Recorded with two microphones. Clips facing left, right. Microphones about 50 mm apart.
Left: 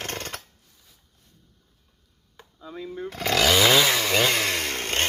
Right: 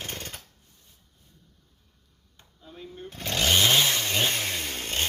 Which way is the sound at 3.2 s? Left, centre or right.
Left.